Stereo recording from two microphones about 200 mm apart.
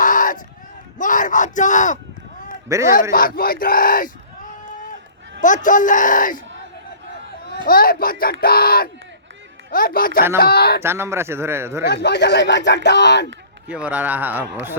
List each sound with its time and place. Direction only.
0.0 s a sound: 40° left (ahead or behind)
0.9 s speech: 40° left (ahead or behind)
2.6 s a man's voice: 15° right (ahead or behind)
2.9 s speech: 45° left (ahead or behind)
5.4 s speech: 40° left (ahead or behind)
7.5 s speech: 45° left (ahead or behind)
10.8 s a man's voice: 15° right (ahead or behind)
12.0 s speech: 55° left (ahead or behind)
13.7 s a man's voice: 5° right (ahead or behind)